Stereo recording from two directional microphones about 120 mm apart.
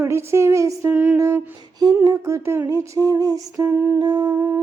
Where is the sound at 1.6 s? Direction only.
35° right (ahead or behind).